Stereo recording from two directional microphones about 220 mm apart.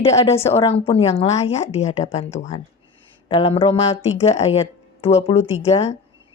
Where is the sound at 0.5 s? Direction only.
25° left (ahead or behind).